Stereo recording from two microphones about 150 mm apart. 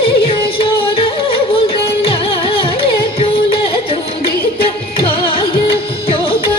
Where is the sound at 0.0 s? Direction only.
35° left (ahead or behind).